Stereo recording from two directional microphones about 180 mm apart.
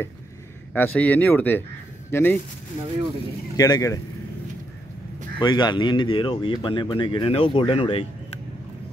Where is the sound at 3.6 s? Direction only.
20° left (ahead or behind).